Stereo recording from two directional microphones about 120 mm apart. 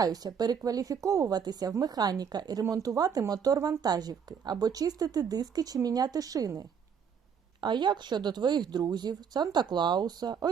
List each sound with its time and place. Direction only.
0.0 s speech: 30° right (ahead or behind)